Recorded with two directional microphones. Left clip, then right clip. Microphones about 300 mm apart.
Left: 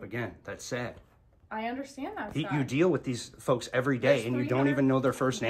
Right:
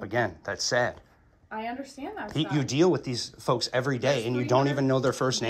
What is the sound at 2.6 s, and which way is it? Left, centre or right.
Speech, centre.